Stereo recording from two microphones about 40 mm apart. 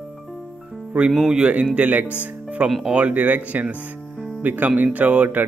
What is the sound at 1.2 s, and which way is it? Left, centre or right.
Speech, right.